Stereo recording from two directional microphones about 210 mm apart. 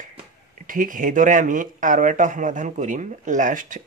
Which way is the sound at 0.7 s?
40° right (ahead or behind).